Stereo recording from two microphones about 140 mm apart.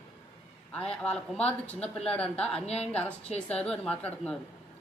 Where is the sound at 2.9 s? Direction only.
10° left (ahead or behind).